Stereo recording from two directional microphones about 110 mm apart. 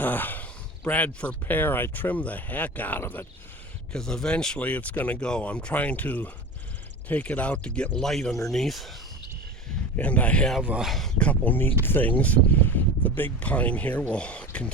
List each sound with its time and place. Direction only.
0.0 s a sound: 15° left (ahead or behind)
0.9 s speech: 15° left (ahead or behind)
3.9 s speech: 5° left (ahead or behind)
10.0 s speech: 10° left (ahead or behind)
10.6 s speech: 10° right (ahead or behind)
10.8 s speech: centre (ahead or behind)
11.2 s speech: 15° left (ahead or behind)